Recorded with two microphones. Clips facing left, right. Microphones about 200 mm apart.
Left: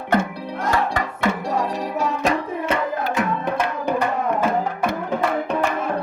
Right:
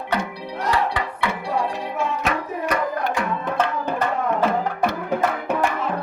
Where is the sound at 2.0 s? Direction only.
35° left (ahead or behind).